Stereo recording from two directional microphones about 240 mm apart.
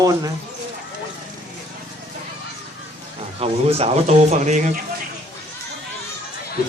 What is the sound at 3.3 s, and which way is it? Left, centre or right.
A man's voice, right.